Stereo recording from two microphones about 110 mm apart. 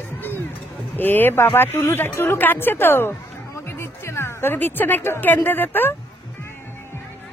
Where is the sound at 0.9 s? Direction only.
20° left (ahead or behind).